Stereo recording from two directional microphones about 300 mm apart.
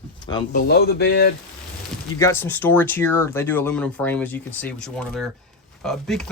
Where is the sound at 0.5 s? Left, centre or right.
Left.